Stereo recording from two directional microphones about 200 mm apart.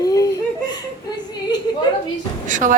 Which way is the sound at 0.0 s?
20° left (ahead or behind).